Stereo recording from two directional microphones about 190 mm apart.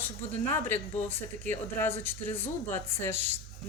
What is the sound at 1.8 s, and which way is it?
Speech, 10° left (ahead or behind).